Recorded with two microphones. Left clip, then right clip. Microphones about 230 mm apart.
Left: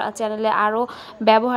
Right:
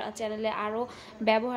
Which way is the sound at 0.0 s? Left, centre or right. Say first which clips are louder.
Left 10 dB; left.